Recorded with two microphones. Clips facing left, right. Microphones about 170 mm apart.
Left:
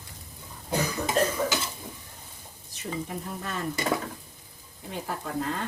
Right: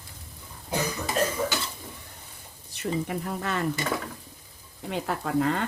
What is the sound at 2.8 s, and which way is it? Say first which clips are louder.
Speech: right 5 dB; 75° right (ahead or behind).